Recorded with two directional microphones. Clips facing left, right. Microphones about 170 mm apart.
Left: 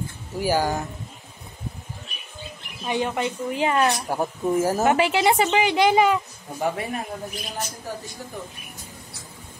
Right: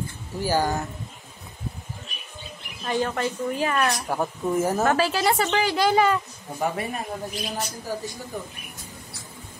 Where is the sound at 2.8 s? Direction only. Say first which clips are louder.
Even; 15° left (ahead or behind).